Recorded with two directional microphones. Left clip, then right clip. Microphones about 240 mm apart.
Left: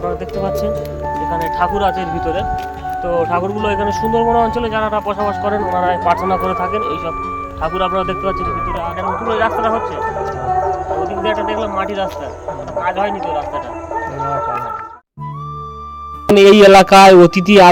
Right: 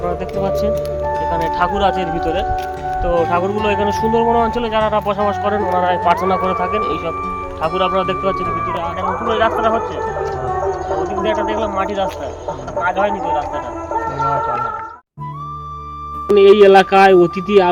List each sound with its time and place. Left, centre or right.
0.0 s speech: centre
9.0 s speech: centre
11.1 s speech: centre
16.3 s speech: left